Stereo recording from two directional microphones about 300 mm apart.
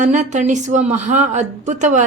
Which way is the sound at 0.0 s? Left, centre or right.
Right.